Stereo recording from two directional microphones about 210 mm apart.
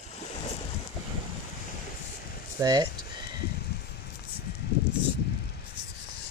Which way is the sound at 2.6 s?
20° right (ahead or behind).